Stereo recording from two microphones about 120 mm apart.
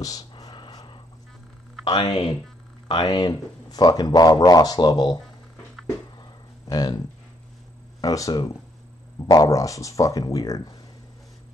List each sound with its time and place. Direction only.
0.0 s a sound: 30° left (ahead or behind)
1.9 s speech: 50° left (ahead or behind)
2.9 s speech: 40° left (ahead or behind)
6.7 s speech: 35° left (ahead or behind)
8.0 s speech: 30° left (ahead or behind)